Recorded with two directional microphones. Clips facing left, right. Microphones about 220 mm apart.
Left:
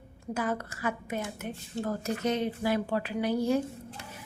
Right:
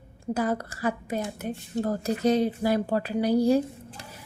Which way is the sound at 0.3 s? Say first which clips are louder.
Right 4 dB; 35° right (ahead or behind).